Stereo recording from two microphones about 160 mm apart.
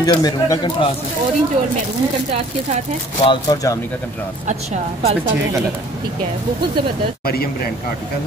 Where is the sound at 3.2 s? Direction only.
30° left (ahead or behind).